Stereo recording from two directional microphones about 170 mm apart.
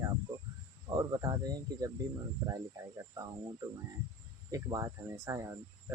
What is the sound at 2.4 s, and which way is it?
Speech, 20° right (ahead or behind).